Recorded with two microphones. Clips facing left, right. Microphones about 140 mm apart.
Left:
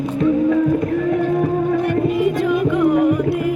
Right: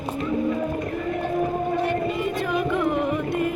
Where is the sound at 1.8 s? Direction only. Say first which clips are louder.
Left 7 dB; 55° left (ahead or behind).